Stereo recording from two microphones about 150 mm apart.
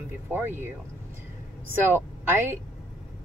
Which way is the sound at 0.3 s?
15° right (ahead or behind).